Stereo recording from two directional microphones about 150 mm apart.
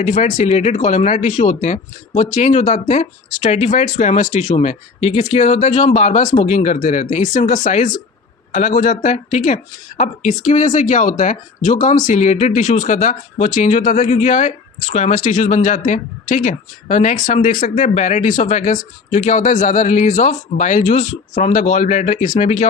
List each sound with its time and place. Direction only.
0.0 s speech: 55° left (ahead or behind)